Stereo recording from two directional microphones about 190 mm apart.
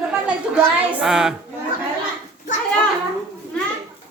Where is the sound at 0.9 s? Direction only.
5° right (ahead or behind).